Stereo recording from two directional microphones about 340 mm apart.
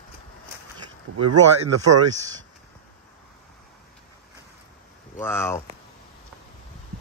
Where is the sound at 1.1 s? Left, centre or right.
Right.